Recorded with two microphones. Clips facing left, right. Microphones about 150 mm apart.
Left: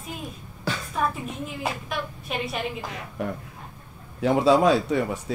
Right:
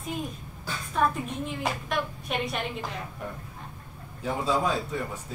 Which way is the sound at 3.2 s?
80° left.